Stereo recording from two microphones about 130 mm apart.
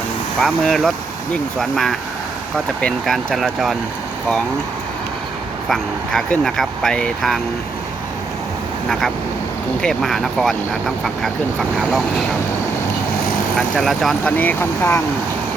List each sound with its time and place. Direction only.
0.4 s speech: 5° left (ahead or behind)
5.6 s speech: 5° left (ahead or behind)
8.9 s speech: centre (ahead or behind)
13.6 s speech: centre (ahead or behind)
14.3 s speech: 15° left (ahead or behind)